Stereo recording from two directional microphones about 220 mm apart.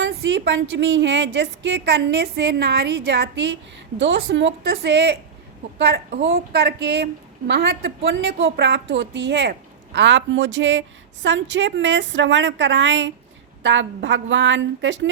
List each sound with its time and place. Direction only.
0.0 s a woman's voice: 55° right (ahead or behind)